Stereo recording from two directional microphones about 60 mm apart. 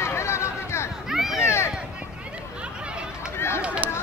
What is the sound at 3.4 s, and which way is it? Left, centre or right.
Run, left.